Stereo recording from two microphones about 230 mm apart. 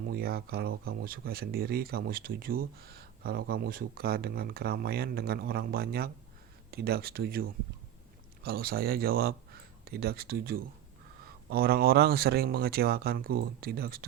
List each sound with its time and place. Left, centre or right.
0.0 s speech: right